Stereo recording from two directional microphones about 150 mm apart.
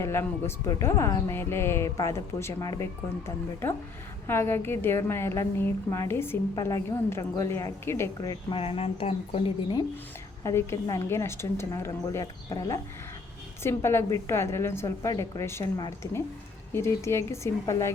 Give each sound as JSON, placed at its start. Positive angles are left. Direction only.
{"t": 0.0, "sound": "a woman's voice", "side_deg": 15}
{"t": 10.4, "sound": "a woman's voice", "side_deg": 20}
{"t": 16.7, "sound": "a woman's voice", "side_deg": 20}